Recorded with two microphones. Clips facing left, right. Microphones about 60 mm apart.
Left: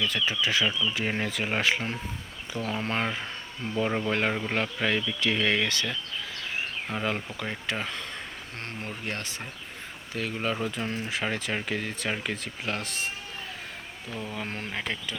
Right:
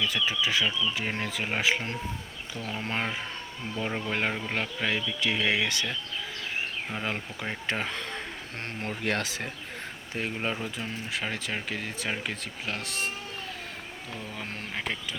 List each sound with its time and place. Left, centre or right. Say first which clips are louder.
0.0 s speech: even; centre
6.9 s speech: left 4 dB; centre
7.7 s speech: right 3 dB; right
9.0 s speech: right 5 dB; right
10.3 s speech: left 3 dB; centre
10.6 s speech: left 4 dB; centre
14.2 s speech: left 5 dB; centre